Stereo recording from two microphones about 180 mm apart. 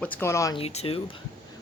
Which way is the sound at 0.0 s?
10° left (ahead or behind).